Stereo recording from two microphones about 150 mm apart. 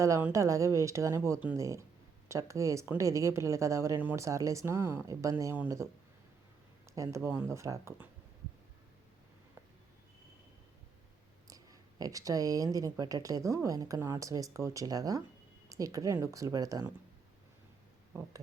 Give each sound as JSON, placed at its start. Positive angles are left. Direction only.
{"t": 0.0, "sound": "speech", "side_deg": -15}
{"t": 6.9, "sound": "speech", "side_deg": -20}
{"t": 11.4, "sound": "speech", "side_deg": -25}